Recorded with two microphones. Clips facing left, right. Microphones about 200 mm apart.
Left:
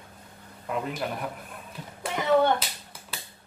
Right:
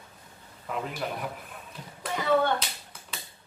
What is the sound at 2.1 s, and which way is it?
Clapping, 20° left (ahead or behind).